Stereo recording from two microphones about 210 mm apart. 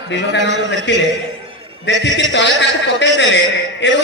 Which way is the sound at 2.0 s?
60° left (ahead or behind).